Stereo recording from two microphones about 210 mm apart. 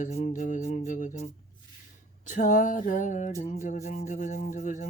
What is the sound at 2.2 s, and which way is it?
Speech, 40° left (ahead or behind).